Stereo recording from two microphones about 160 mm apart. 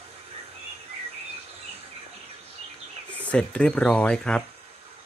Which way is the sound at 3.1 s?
10° left (ahead or behind).